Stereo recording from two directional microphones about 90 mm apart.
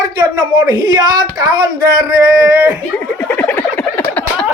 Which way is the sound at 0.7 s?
55° right (ahead or behind).